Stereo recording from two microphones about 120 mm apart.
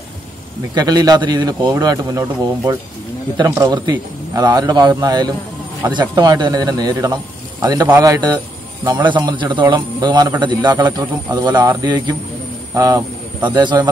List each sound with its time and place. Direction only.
0.7 s a man's voice: 35° right (ahead or behind)